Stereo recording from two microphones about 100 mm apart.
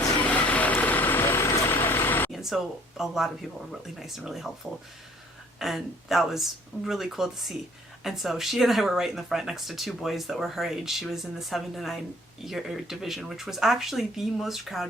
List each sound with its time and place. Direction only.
0.2 s vehicle: 15° left (ahead or behind)
2.3 s speech: centre (ahead or behind)
5.5 s speech: centre (ahead or behind)